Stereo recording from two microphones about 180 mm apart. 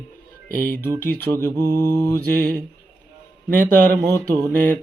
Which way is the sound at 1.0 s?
10° left (ahead or behind).